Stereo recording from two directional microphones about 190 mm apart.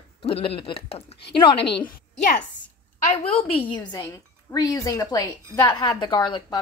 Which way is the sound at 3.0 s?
35° left (ahead or behind).